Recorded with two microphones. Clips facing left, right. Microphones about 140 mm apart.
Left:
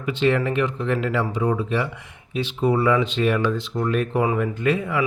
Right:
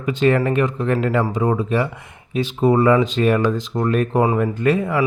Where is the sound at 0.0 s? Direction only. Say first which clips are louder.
Right 3 dB; 45° right (ahead or behind).